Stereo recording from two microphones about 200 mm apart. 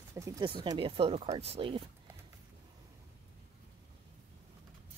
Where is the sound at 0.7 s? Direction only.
25° right (ahead or behind).